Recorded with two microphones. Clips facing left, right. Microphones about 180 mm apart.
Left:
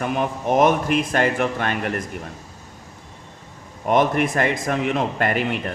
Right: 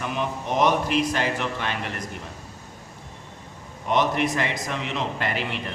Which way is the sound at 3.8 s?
50° left (ahead or behind).